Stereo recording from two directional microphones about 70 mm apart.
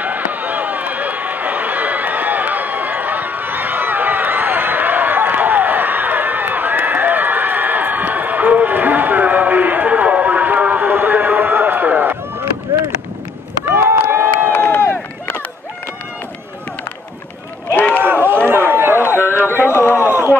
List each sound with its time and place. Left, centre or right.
0.0 s run: right
14.0 s run: right
14.5 s run: left
18.0 s run: right
19.0 s a sound: left
20.0 s a sound: right